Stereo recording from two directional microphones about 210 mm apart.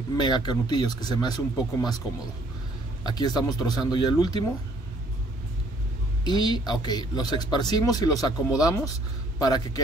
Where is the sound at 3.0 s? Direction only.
20° left (ahead or behind).